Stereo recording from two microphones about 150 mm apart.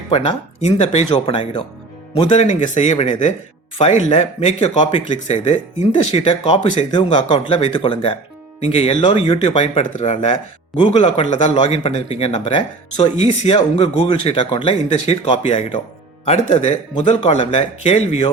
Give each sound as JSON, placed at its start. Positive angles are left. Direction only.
{"t": 0.1, "sound": "speech", "side_deg": 45}
{"t": 5.3, "sound": "speech", "side_deg": 50}
{"t": 8.6, "sound": "speech", "side_deg": 45}
{"t": 10.3, "sound": "speech", "side_deg": 35}
{"t": 13.5, "sound": "speech", "side_deg": 40}
{"t": 17.0, "sound": "speech", "side_deg": 40}